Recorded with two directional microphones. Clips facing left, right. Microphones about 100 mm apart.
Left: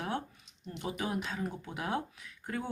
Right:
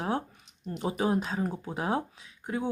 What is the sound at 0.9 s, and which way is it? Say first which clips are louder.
Speech: right 7 dB; 35° right (ahead or behind).